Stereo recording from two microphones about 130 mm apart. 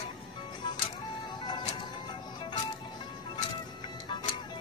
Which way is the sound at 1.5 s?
35° left (ahead or behind).